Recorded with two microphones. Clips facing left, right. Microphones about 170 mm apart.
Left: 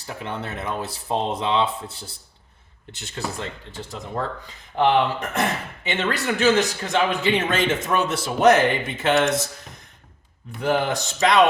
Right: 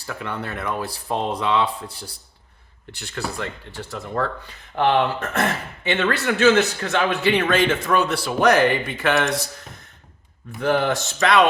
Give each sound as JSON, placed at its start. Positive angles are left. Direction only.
{"t": 0.0, "sound": "speech", "side_deg": 20}
{"t": 10.6, "sound": "speech", "side_deg": 15}